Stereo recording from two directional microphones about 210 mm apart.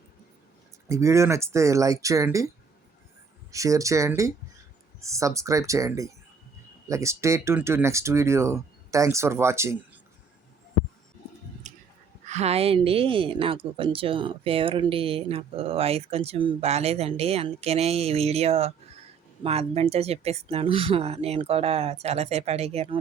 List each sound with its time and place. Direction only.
0.9 s speech: 15° right (ahead or behind)
3.5 s speech: 15° right (ahead or behind)
11.6 s a sound: 35° right (ahead or behind)
12.2 s a woman's voice: 30° right (ahead or behind)